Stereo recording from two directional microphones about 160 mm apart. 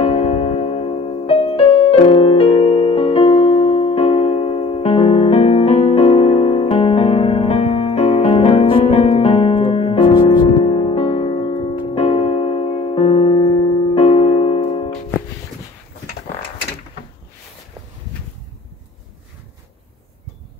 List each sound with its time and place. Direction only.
0.0 s music: 35° left (ahead or behind)